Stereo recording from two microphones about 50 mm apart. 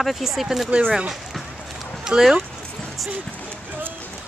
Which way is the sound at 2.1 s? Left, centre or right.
Right.